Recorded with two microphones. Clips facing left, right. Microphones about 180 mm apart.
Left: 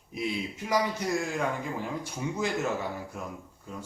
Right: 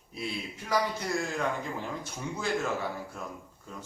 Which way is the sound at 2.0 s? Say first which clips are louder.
Left 3 dB; 15° left (ahead or behind).